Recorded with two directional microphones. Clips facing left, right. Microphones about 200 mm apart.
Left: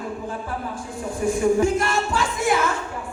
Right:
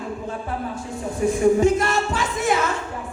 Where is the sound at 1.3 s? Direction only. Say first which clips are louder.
Right 2 dB; 20° right (ahead or behind).